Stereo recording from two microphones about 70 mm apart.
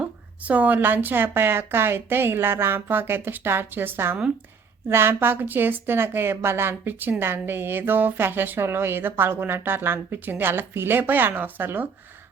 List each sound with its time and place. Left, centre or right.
0.0 s a woman's voice: right